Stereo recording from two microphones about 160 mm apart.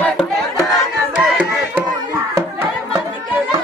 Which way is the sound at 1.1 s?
10° right (ahead or behind).